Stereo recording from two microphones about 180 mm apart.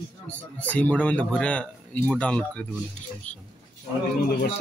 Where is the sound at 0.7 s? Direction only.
10° left (ahead or behind).